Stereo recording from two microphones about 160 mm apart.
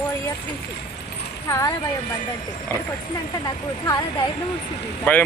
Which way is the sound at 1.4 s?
20° left (ahead or behind).